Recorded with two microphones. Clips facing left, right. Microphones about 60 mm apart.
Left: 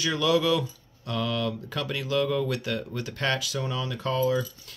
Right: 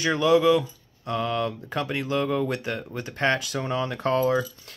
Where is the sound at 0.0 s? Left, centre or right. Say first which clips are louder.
Right 4 dB; right.